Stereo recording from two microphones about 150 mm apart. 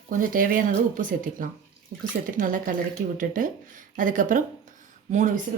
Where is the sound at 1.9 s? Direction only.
75° right (ahead or behind).